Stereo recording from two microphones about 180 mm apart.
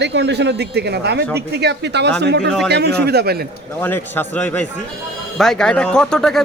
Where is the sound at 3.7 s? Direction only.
10° left (ahead or behind).